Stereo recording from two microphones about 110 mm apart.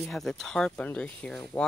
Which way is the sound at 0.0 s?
5° left (ahead or behind).